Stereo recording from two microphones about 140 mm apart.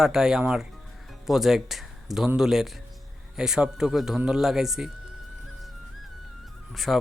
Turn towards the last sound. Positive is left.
turn(degrees=0)  # may be behind; listen again after turning